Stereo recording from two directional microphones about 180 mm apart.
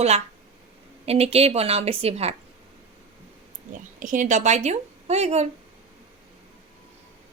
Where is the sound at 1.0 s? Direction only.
35° right (ahead or behind).